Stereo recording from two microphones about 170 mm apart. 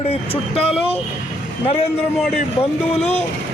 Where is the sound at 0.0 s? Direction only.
35° left (ahead or behind).